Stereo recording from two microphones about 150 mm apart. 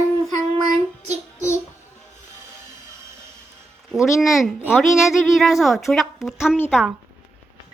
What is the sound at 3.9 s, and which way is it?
A woman's voice, centre (ahead or behind).